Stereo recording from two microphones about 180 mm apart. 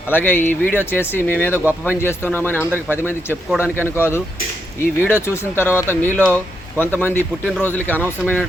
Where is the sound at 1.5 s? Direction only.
10° right (ahead or behind).